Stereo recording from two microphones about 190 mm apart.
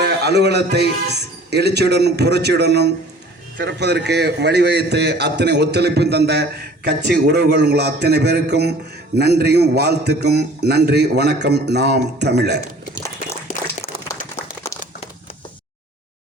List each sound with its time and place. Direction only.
0.0 s a man's voice: 60° right (ahead or behind)